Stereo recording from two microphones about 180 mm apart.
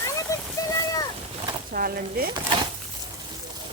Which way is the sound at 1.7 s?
55° right (ahead or behind).